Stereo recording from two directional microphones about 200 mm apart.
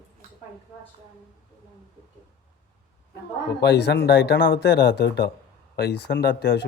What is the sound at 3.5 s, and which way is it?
Speech, 55° left (ahead or behind).